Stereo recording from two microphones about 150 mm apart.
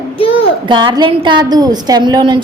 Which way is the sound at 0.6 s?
35° right (ahead or behind).